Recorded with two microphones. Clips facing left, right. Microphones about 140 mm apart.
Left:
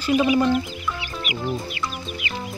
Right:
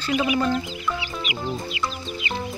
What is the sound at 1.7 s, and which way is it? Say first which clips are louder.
Music: right 1 dB; 25° right (ahead or behind).